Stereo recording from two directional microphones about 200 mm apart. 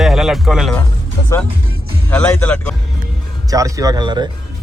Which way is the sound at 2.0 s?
10° left (ahead or behind).